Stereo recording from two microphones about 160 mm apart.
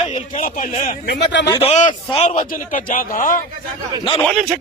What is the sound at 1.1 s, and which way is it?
Speech, 90° left.